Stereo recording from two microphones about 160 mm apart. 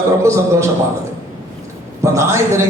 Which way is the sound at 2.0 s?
20° right (ahead or behind).